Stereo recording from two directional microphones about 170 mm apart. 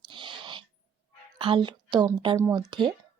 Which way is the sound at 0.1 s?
30° right (ahead or behind).